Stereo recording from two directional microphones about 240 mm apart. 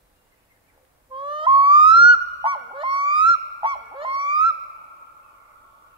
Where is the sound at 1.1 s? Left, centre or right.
Right.